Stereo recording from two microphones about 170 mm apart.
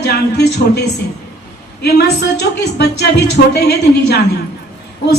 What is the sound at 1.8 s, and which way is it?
Speech, 75° left (ahead or behind).